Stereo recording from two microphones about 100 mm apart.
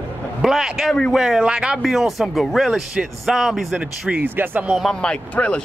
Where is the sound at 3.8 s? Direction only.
15° right (ahead or behind).